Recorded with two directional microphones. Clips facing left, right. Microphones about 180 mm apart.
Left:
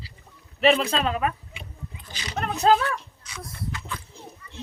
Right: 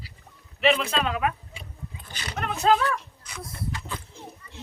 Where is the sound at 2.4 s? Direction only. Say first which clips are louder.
Left 2 dB; 35° left (ahead or behind).